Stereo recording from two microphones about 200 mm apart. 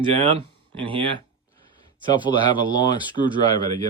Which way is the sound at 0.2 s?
30° right (ahead or behind).